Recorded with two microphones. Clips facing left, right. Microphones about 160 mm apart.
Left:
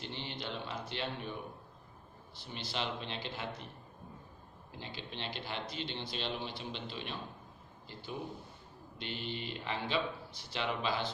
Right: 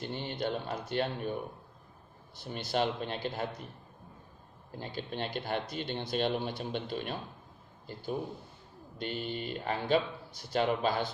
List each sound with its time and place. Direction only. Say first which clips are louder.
0.0 s speech: right 7 dB; 50° right (ahead or behind)
2.4 s speech: right 8 dB; 45° right (ahead or behind)
4.7 s speech: right 7 dB; 45° right (ahead or behind)